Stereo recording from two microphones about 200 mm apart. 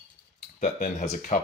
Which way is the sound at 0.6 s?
40° left (ahead or behind).